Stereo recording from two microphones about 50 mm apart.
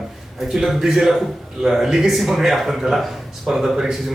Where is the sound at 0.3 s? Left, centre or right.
Centre.